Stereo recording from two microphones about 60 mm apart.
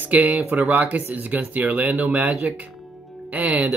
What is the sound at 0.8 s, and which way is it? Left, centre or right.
Speech, right.